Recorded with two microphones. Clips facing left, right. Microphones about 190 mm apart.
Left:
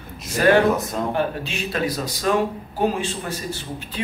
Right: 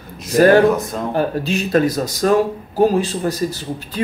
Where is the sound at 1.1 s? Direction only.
40° right (ahead or behind).